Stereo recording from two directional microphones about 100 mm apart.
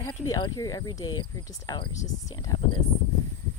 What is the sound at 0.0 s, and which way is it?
Speech, 40° left (ahead or behind).